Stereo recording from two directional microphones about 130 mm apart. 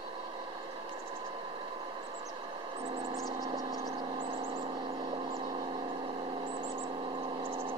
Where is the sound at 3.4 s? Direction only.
30° right (ahead or behind).